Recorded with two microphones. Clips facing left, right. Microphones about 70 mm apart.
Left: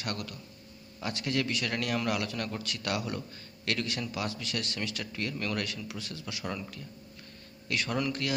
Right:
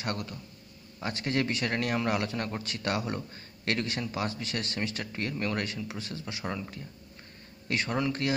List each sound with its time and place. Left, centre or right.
0.0 s a man's voice: right